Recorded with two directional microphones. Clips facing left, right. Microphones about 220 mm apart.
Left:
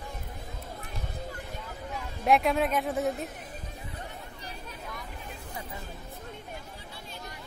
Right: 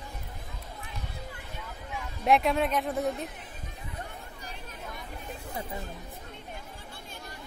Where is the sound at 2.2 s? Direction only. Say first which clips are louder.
Even; centre (ahead or behind).